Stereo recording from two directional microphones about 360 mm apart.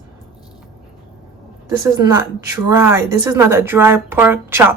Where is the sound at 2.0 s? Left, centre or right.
Centre.